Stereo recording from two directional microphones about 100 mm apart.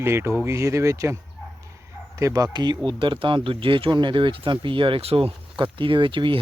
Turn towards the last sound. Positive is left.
turn(degrees=-55)  # may be behind; listen again after turning